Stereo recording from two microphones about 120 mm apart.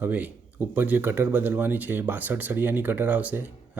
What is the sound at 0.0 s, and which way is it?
Speech, 15° right (ahead or behind).